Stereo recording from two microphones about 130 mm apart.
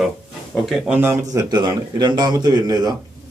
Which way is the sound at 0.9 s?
15° right (ahead or behind).